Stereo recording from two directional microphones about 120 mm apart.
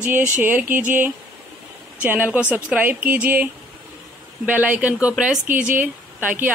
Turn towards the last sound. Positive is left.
turn(degrees=-15)  # may be behind; listen again after turning